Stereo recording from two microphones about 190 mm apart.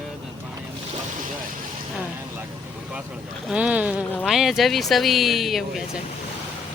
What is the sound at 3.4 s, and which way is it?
A woman's voice, 5° right (ahead or behind).